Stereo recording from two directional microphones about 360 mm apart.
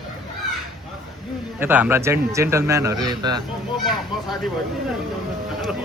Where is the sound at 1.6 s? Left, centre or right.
Centre.